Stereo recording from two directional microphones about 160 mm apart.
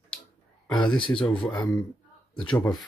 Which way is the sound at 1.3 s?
30° left (ahead or behind).